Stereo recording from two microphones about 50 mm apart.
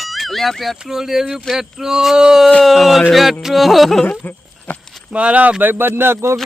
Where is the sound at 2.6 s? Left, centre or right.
Centre.